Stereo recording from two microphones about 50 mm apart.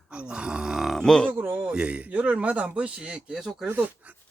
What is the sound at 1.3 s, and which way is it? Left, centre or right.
Speech, right.